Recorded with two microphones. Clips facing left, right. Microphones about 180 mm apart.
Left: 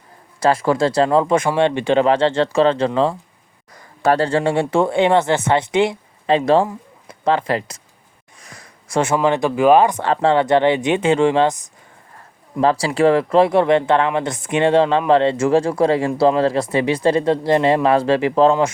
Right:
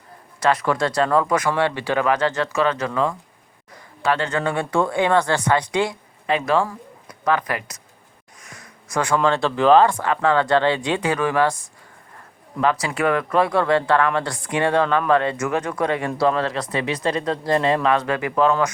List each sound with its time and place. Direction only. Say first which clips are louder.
0.3 s speech: left 4 dB; 30° left (ahead or behind)
8.4 s a sound: left 1 dB; 30° left (ahead or behind)
9.1 s speech: left 1 dB; 15° left (ahead or behind)
10.0 s speech: left 3 dB; 30° left (ahead or behind)
12.5 s speech: left 5 dB; 30° left (ahead or behind)